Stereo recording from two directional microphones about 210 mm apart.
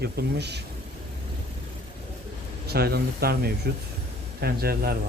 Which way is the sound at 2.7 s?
50° right (ahead or behind).